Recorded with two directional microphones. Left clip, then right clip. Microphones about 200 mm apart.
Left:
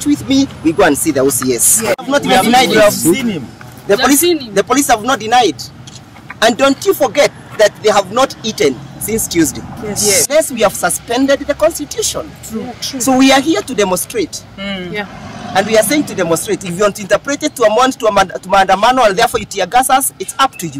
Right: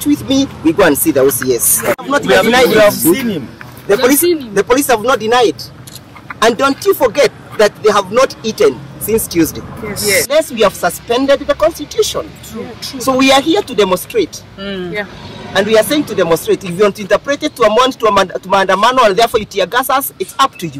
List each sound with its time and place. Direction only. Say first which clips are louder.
0.0 s speech: even; 5° left (ahead or behind)
2.7 s speech: right 1 dB; 15° right (ahead or behind)
3.8 s speech: even; 10° left (ahead or behind)
15.5 s speech: right 1 dB; 5° left (ahead or behind)